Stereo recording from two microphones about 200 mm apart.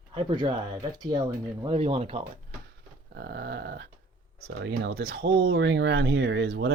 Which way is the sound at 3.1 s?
50° right (ahead or behind).